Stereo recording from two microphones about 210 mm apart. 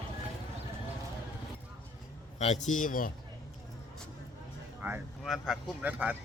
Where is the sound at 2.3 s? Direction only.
35° left (ahead or behind).